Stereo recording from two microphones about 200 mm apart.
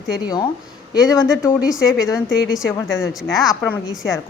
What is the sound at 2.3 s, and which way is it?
Speech, 65° left (ahead or behind).